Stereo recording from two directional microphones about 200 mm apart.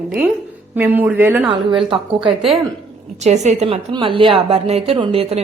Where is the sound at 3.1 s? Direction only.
35° right (ahead or behind).